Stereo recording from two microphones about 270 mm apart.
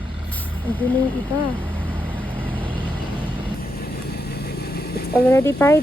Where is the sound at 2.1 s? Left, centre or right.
Centre.